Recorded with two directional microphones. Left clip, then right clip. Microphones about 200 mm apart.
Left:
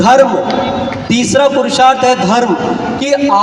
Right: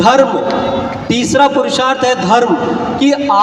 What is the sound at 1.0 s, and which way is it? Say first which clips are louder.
A man's voice: even; 25° right (ahead or behind).